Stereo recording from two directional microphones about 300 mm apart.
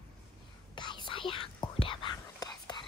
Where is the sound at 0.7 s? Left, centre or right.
Centre.